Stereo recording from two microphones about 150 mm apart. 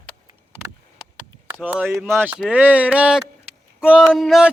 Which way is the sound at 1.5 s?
15° right (ahead or behind).